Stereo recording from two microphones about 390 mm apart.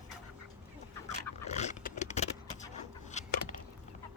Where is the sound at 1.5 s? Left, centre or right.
Centre.